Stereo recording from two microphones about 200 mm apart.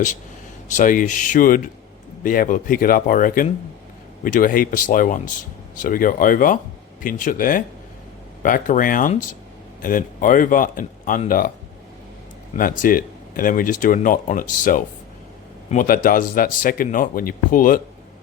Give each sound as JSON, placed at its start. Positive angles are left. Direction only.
{"t": 0.7, "sound": "speech", "side_deg": 40}
{"t": 12.5, "sound": "speech", "side_deg": 45}